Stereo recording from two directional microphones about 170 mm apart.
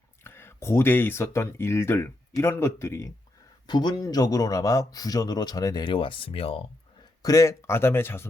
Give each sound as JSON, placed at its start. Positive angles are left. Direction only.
{"t": 0.3, "sound": "speech", "side_deg": 15}
{"t": 7.2, "sound": "speech", "side_deg": 20}